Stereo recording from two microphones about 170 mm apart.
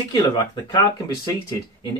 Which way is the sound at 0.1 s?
25° left (ahead or behind).